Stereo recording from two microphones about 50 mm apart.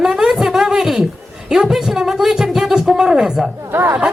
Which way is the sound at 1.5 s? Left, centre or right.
Centre.